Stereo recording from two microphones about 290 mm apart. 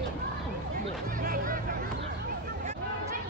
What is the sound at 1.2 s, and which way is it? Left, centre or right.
Music, right.